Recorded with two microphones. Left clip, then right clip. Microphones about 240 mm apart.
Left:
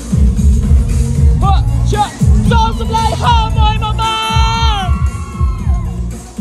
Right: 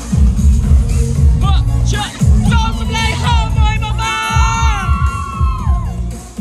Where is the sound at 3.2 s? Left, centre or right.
Right.